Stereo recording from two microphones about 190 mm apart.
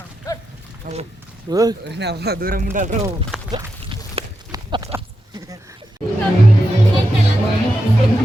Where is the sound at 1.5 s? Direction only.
20° right (ahead or behind).